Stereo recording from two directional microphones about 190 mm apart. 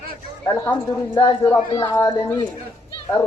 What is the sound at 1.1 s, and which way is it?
Speech, 25° left (ahead or behind).